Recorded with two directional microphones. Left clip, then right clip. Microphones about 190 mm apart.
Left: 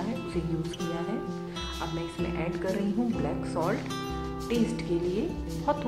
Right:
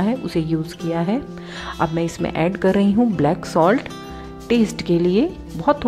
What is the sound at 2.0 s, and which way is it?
A woman's voice, 45° right (ahead or behind).